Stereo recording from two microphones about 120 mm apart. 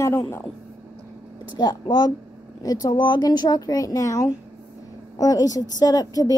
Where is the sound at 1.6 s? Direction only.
35° left (ahead or behind).